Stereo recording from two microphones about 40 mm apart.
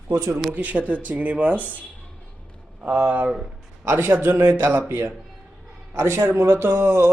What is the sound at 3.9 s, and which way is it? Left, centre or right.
Speech, right.